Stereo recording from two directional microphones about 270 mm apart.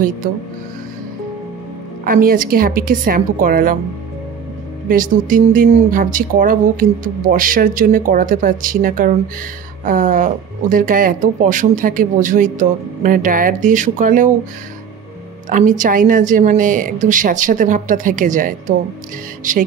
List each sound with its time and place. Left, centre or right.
2.0 s speech: right
4.8 s speech: right
15.5 s speech: right